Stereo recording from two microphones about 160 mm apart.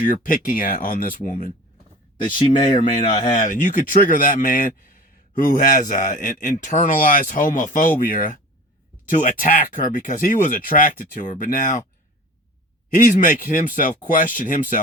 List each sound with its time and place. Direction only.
0.0 s speech: 60° left (ahead or behind)
2.6 s speech: 30° left (ahead or behind)
2.8 s speech: 55° left (ahead or behind)
13.0 s speech: 55° left (ahead or behind)